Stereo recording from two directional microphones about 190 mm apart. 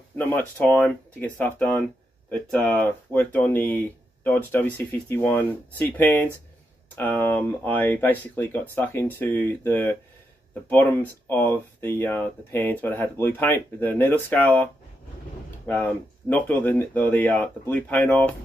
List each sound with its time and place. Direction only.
0.2 s speech: 10° left (ahead or behind)
15.6 s speech: 10° left (ahead or behind)